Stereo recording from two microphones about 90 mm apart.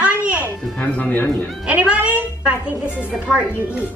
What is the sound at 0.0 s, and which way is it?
Music, 15° right (ahead or behind).